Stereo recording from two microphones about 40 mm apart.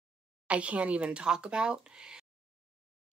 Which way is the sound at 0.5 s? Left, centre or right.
Right.